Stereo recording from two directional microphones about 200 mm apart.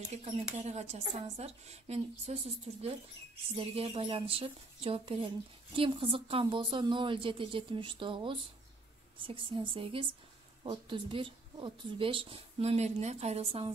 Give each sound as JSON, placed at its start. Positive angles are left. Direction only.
{"t": 0.1, "sound": "a woman's voice", "side_deg": -35}